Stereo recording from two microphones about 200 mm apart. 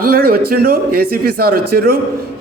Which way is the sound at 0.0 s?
50° right (ahead or behind).